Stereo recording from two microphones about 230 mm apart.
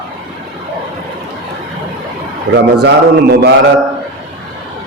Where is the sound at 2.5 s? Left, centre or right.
Right.